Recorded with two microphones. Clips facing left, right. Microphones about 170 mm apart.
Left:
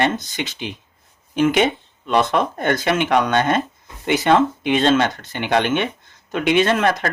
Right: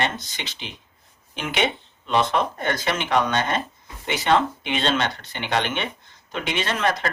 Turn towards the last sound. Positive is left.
turn(degrees=50)  # may be behind; listen again after turning